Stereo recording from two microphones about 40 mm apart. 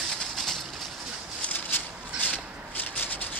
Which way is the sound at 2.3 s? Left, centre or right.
Left.